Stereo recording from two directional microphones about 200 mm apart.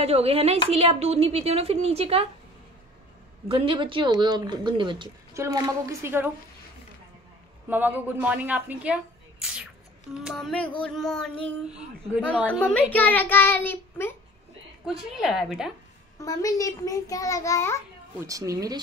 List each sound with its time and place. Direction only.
0.0 s speech: 30° right (ahead or behind)
3.4 s speech: 25° right (ahead or behind)
7.7 s a woman's voice: 10° right (ahead or behind); by 14.1 s 10° left (ahead or behind)
14.9 s speech: centre (ahead or behind)
16.2 s a child's voice: 15° left (ahead or behind)
18.2 s a woman's voice: 15° right (ahead or behind)